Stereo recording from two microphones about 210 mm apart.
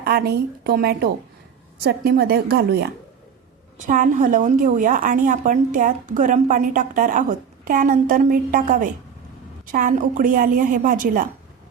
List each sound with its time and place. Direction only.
0.0 s a woman's voice: 50° right (ahead or behind)
3.8 s a woman's voice: 35° right (ahead or behind)